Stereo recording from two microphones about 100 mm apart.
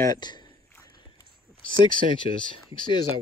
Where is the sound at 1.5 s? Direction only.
55° left (ahead or behind).